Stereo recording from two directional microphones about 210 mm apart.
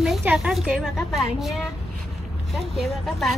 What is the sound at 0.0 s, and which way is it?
A woman's voice, 5° right (ahead or behind).